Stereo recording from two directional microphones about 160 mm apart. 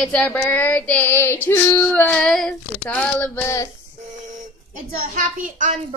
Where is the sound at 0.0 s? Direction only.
5° left (ahead or behind).